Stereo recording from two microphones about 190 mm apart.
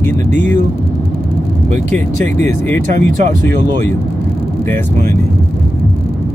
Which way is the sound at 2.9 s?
45° right (ahead or behind).